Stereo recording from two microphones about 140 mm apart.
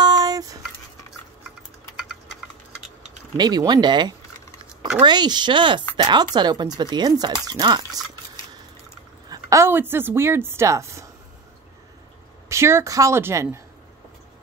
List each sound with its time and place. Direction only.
0.0 s a sound: 30° right (ahead or behind)
3.3 s a woman's voice: 30° right (ahead or behind)
9.3 s a woman's voice: 20° right (ahead or behind)
12.4 s a woman's voice: 20° right (ahead or behind)